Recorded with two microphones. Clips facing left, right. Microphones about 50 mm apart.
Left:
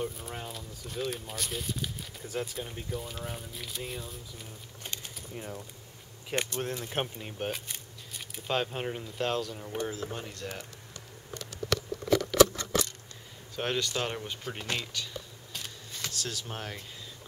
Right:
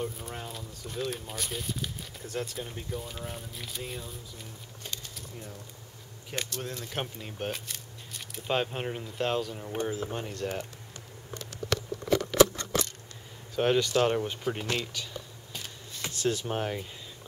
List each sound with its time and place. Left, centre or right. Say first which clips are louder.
0.0 s speech: even; centre
4.8 s a sound: even; left
5.3 s speech: left 5 dB; left
6.3 s speech: left 4 dB; left
7.2 s speech: even; centre
7.6 s a sound: right 1 dB; centre
8.5 s speech: right 1 dB; centre
10.3 s speech: right 6 dB; right
12.1 s scissors: even; right
13.6 s speech: right 7 dB; centre
16.0 s speech: right 8 dB; right